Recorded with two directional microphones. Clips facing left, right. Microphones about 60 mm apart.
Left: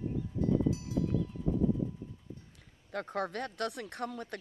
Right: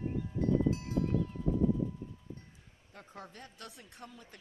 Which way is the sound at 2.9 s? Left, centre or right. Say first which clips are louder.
Left 14 dB; left.